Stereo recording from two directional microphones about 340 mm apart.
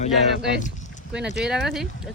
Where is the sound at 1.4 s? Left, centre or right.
Centre.